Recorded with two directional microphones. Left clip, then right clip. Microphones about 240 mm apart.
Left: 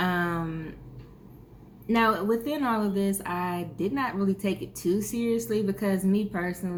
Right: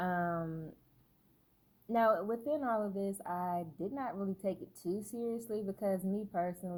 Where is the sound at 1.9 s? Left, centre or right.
Right.